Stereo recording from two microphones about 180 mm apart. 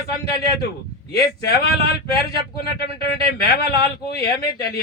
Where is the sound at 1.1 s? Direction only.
60° left (ahead or behind).